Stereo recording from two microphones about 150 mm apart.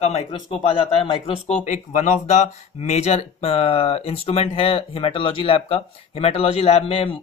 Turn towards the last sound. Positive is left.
turn(degrees=40)  # may be behind; listen again after turning